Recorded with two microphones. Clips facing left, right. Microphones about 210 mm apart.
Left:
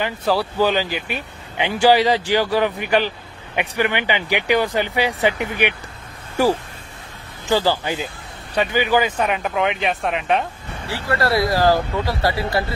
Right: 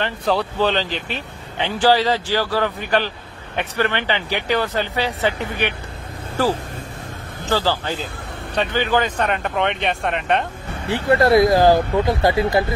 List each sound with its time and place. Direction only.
0.0 s speech: 5° left (ahead or behind)
7.4 s speech: 15° left (ahead or behind)
10.9 s speech: 20° right (ahead or behind)